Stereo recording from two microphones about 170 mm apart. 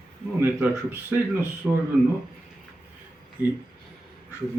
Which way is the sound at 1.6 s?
Centre (ahead or behind).